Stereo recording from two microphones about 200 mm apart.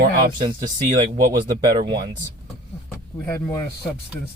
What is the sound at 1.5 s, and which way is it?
Speech, 20° right (ahead or behind).